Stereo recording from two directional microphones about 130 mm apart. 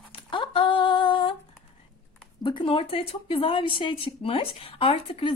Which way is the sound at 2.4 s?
40° left (ahead or behind).